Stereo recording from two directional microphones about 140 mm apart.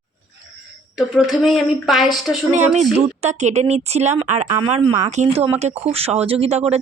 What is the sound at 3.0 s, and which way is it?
Speech, 50° right (ahead or behind).